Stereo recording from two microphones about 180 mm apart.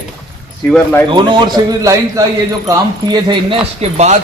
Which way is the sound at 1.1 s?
25° right (ahead or behind).